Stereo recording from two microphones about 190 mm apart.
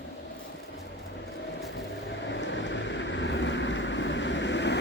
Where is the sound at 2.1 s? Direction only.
70° left (ahead or behind).